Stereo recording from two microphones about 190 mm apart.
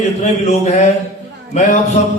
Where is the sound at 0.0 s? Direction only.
35° left (ahead or behind).